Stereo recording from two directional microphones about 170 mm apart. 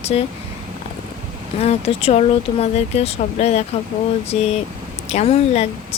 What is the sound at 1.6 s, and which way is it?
A woman's voice, 35° left (ahead or behind).